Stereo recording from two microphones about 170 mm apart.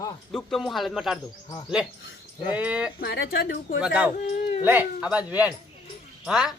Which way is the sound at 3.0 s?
65° left (ahead or behind).